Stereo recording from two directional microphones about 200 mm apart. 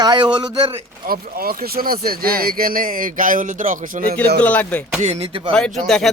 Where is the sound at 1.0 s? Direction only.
50° right (ahead or behind).